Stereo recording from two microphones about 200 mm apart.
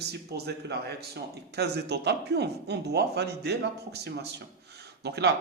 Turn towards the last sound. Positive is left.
turn(degrees=-55)  # may be behind; listen again after turning